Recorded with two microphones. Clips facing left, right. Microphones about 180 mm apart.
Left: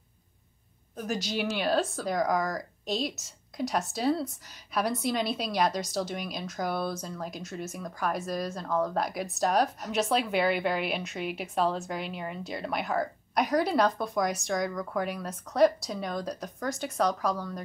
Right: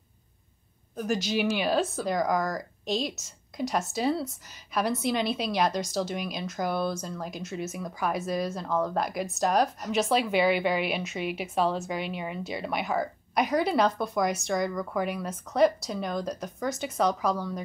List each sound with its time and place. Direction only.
0.9 s a woman's voice: centre (ahead or behind)